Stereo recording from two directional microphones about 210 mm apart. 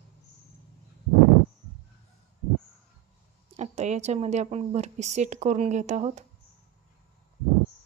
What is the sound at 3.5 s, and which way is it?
A woman's voice, 30° right (ahead or behind).